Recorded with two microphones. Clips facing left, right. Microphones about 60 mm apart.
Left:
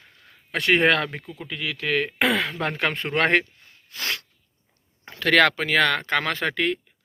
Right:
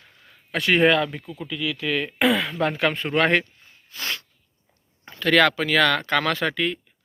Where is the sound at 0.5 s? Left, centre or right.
Left.